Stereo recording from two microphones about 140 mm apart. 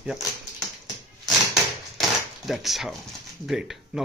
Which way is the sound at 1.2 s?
Centre (ahead or behind).